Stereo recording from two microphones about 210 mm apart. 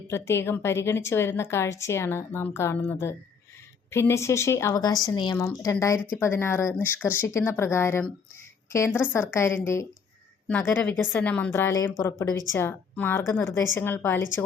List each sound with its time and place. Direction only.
0.1 s a woman's voice: 10° left (ahead or behind)